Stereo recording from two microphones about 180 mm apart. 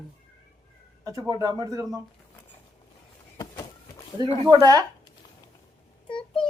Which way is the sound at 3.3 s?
25° left (ahead or behind).